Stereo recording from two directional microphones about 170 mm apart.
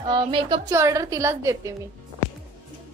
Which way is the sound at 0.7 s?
20° right (ahead or behind).